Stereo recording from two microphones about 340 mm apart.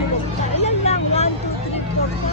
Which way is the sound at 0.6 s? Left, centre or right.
Centre.